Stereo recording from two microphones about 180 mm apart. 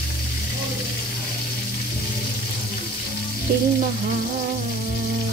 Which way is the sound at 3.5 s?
60° right (ahead or behind).